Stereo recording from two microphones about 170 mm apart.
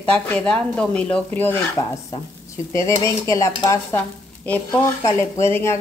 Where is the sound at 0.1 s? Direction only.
5° left (ahead or behind).